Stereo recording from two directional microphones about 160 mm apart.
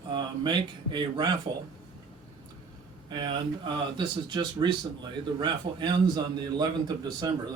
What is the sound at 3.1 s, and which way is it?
Speech, 30° right (ahead or behind).